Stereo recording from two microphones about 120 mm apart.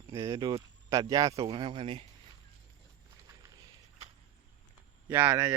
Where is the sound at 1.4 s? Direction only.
45° right (ahead or behind).